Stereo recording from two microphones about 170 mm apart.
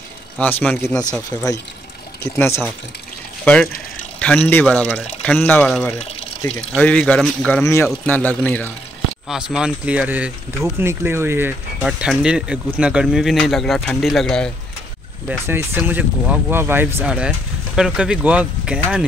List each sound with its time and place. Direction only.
0.4 s speech: 10° left (ahead or behind)
2.2 s speech: 15° left (ahead or behind)
4.2 s speech: 10° left (ahead or behind)
9.3 s speech: 5° right (ahead or behind)
15.2 s speech: 15° right (ahead or behind)